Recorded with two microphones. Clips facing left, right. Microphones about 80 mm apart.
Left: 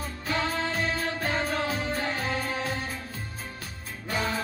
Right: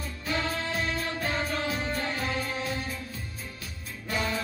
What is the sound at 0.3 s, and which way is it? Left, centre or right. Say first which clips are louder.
Music: left 2 dB; left.